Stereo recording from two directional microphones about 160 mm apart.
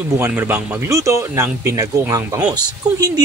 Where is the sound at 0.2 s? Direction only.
10° right (ahead or behind).